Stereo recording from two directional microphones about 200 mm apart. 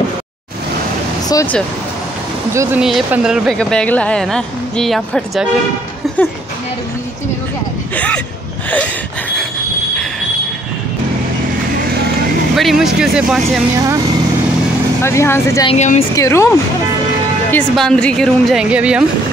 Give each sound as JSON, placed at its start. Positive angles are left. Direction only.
{"t": 1.3, "sound": "speech", "side_deg": 10}
{"t": 2.5, "sound": "speech", "side_deg": -15}
{"t": 2.8, "sound": "speech", "side_deg": -5}
{"t": 6.0, "sound": "a sound", "side_deg": 0}
{"t": 7.9, "sound": "a sound", "side_deg": 5}
{"t": 12.5, "sound": "speech", "side_deg": 0}
{"t": 15.0, "sound": "speech", "side_deg": 10}
{"t": 15.7, "sound": "speech", "side_deg": 35}
{"t": 16.2, "sound": "speech", "side_deg": 15}